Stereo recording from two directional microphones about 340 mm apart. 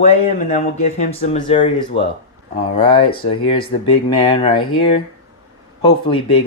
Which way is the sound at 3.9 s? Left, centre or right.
Centre.